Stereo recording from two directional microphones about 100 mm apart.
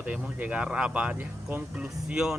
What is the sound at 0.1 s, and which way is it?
Speech, 15° right (ahead or behind).